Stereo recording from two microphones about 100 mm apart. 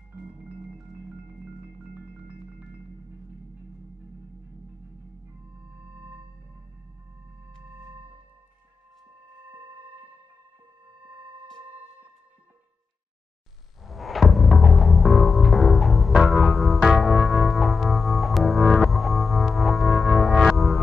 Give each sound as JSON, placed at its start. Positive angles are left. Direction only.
{"t": 0.2, "sound": "marimba", "side_deg": -15}
{"t": 5.9, "sound": "music", "side_deg": -20}
{"t": 7.6, "sound": "music", "side_deg": -20}
{"t": 9.5, "sound": "music", "side_deg": -20}
{"t": 13.8, "sound": "music", "side_deg": 0}